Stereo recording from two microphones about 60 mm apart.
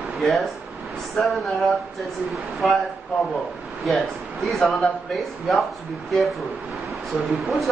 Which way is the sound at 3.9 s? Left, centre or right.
Centre.